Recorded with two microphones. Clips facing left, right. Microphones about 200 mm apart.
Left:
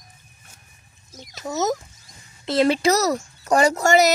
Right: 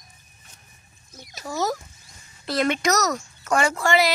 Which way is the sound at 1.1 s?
20° left (ahead or behind).